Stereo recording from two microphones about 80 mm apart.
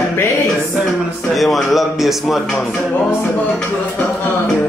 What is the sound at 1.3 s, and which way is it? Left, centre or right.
A man's voice, centre.